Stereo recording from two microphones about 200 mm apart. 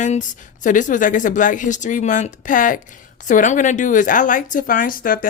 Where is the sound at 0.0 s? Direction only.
40° left (ahead or behind).